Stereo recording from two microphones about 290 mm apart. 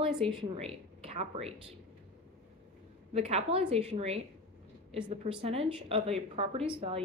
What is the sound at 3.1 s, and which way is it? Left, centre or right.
A woman's voice, right.